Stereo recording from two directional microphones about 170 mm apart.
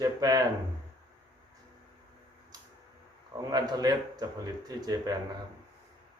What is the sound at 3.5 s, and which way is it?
A man's voice, 25° right (ahead or behind).